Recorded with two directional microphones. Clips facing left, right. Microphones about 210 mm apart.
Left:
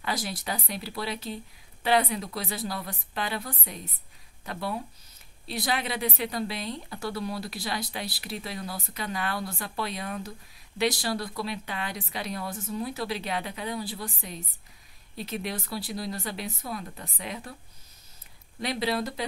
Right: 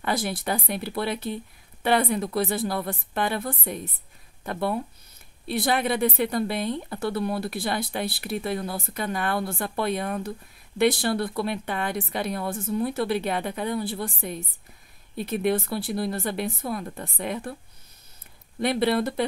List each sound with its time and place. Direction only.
0.0 s a woman's voice: 55° right (ahead or behind)
18.6 s a woman's voice: 55° right (ahead or behind)